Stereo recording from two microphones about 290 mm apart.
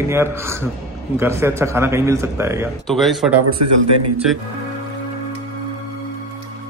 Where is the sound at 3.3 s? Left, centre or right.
Right.